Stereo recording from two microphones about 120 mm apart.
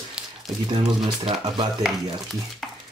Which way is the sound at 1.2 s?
40° right (ahead or behind).